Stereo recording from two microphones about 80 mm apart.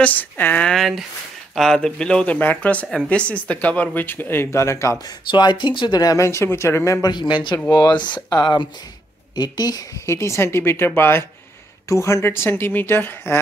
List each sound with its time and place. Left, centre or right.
0.0 s speech: left
0.7 s speech: centre; by 4.9 s left
5.3 s speech: left
6.1 s a woman's voice: left
7.0 s speech: left
10.0 s a woman's voice: left